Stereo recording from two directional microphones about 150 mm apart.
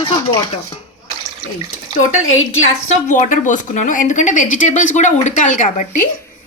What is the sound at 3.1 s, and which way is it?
A woman's voice, 60° left (ahead or behind).